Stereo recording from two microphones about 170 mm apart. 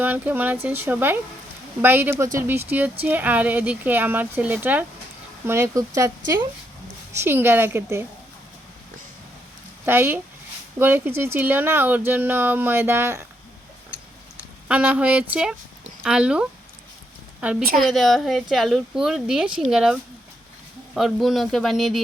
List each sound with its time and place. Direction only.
0.0 s speech: 10° right (ahead or behind)
9.8 s speech: 10° right (ahead or behind)
14.7 s a woman's voice: 5° right (ahead or behind)
17.6 s a woman's voice: 55° right (ahead or behind)
17.8 s a woman's voice: centre (ahead or behind)